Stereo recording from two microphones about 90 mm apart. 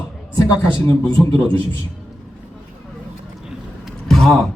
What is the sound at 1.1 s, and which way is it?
Speech, 75° right (ahead or behind).